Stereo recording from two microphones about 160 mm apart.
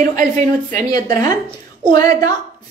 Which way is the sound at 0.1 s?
55° right (ahead or behind).